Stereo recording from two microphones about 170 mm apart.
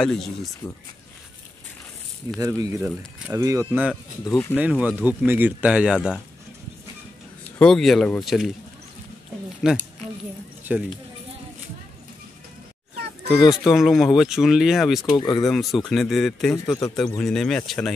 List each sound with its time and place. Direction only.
0.0 s speech: 5° left (ahead or behind)
2.4 s speech: 20° right (ahead or behind)
4.2 s speech: 15° left (ahead or behind)
4.6 s speech: 10° right (ahead or behind)
7.4 s speech: 5° left (ahead or behind)
9.6 s speech: 5° right (ahead or behind)
13.5 s speech: centre (ahead or behind)
15.1 s speech: 25° left (ahead or behind)
15.4 s speech: centre (ahead or behind)